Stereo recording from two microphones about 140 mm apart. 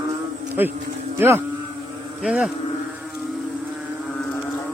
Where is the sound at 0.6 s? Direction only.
15° right (ahead or behind).